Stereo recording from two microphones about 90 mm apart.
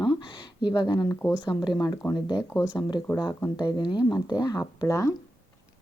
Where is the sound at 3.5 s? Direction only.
55° left (ahead or behind); by 5.1 s 40° left (ahead or behind).